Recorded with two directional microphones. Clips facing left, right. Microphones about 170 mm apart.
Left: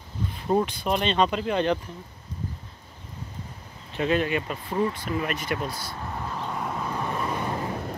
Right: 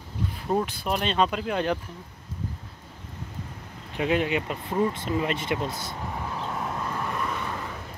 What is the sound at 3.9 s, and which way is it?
Speech, 15° right (ahead or behind).